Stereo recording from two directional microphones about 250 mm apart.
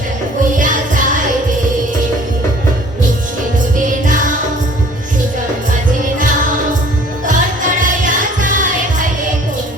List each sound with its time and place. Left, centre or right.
0.5 s music: right
4.0 s music: right
7.3 s music: right